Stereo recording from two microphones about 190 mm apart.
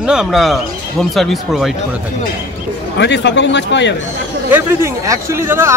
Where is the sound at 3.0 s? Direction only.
65° left (ahead or behind).